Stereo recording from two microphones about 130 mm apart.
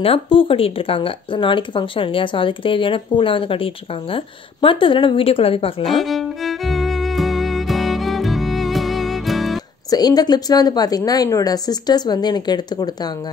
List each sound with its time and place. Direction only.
0.0 s speech: 45° left (ahead or behind)
5.9 s music: centre (ahead or behind)
9.8 s a woman's voice: 30° left (ahead or behind)